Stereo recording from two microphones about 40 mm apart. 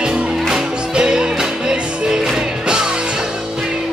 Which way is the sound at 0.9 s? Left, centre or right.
Right.